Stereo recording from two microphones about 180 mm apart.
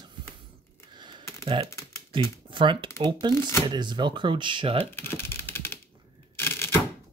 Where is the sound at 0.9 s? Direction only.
25° right (ahead or behind).